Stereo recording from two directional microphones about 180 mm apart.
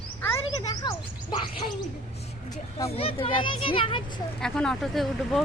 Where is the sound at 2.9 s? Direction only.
30° left (ahead or behind).